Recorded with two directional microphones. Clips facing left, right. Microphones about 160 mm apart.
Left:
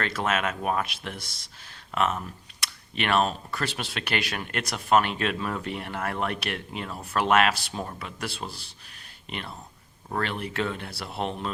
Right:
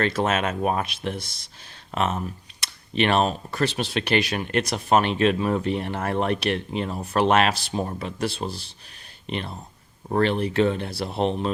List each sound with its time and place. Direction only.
0.0 s speech: 25° right (ahead or behind)